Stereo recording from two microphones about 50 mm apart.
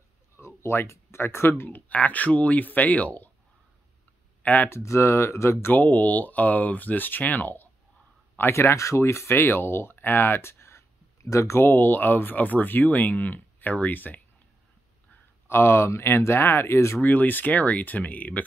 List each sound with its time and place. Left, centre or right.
0.4 s speech: left
1.7 s speech: left
4.4 s a sound: left
4.6 s speech: left
5.8 s speech: left
8.4 s speech: left
11.6 s speech: left
15.4 s speech: left
17.0 s speech: left